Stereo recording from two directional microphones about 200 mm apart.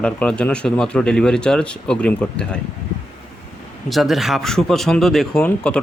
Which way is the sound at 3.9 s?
Centre (ahead or behind).